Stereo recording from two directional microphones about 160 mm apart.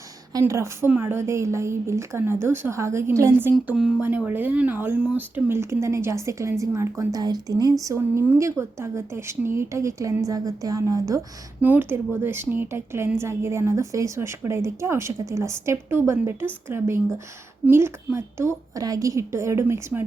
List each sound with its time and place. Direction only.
0.3 s speech: 15° right (ahead or behind)
3.5 s speech: 5° right (ahead or behind)